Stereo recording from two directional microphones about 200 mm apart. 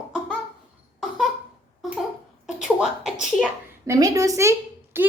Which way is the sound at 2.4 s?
5° right (ahead or behind).